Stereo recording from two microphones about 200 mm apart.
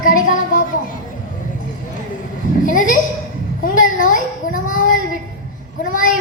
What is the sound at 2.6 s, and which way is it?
Child singing, 40° left (ahead or behind).